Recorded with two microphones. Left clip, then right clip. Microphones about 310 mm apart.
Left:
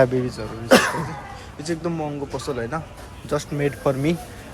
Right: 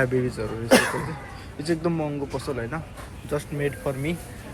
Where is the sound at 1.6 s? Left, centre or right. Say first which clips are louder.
Right 1 dB; centre.